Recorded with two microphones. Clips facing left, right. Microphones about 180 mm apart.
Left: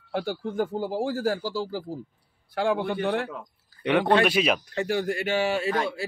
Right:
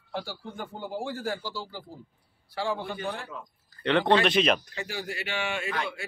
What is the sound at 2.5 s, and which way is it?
Speech, 55° left (ahead or behind).